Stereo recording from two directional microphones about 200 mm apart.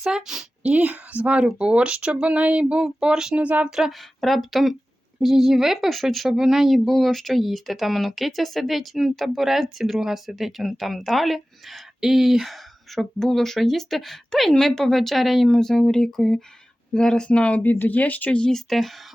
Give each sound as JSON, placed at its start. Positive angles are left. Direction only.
{"t": 0.0, "sound": "speech", "side_deg": -5}